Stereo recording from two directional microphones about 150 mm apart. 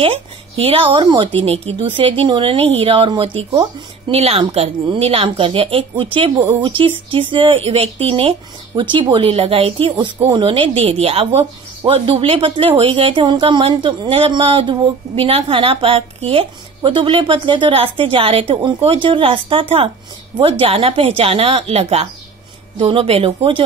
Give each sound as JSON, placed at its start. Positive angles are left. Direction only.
{"t": 0.0, "sound": "speech", "side_deg": -40}